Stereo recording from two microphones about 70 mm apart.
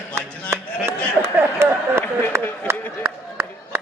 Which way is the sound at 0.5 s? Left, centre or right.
Right.